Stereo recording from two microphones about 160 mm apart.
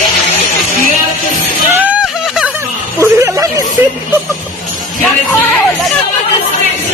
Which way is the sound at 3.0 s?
20° right (ahead or behind).